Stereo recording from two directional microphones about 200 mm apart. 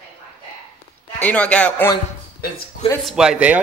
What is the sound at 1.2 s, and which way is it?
Speech, 5° left (ahead or behind).